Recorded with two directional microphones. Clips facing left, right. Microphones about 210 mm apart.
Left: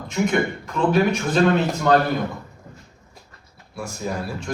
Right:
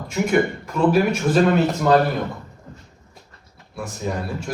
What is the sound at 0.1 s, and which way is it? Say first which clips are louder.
A man's voice: right 2 dB; 5° right (ahead or behind).